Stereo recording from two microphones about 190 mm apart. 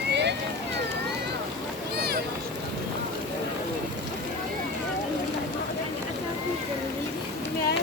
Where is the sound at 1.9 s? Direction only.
60° right (ahead or behind).